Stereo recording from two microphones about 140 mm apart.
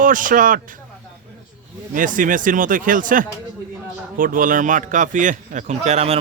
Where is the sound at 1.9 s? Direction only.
70° right (ahead or behind); by 6.2 s 50° right (ahead or behind).